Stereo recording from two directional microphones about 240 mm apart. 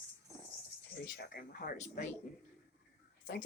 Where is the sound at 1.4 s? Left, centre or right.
Left.